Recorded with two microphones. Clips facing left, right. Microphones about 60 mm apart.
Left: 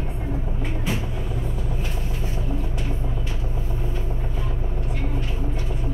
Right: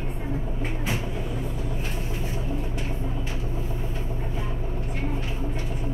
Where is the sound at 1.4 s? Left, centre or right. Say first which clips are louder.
Left 1 dB; left.